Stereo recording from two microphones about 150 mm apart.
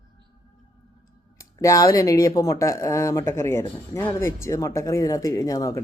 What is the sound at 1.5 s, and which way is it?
Speech, 25° left (ahead or behind).